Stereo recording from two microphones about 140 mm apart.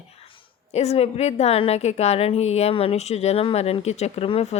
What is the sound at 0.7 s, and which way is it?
A woman's voice, 50° left (ahead or behind).